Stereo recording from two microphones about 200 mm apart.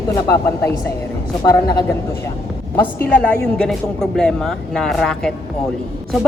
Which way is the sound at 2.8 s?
10° left (ahead or behind).